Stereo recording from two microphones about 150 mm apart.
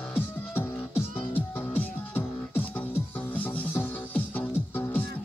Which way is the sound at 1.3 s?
10° left (ahead or behind).